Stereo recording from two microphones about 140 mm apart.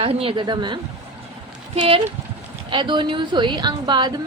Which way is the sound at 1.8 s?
40° right (ahead or behind).